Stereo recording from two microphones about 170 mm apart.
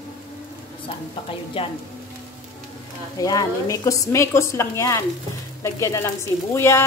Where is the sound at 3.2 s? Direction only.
20° left (ahead or behind).